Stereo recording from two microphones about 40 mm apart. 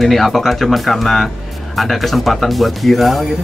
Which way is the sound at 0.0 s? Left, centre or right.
Centre.